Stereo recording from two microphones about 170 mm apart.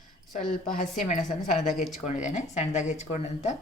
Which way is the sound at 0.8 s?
45° left (ahead or behind).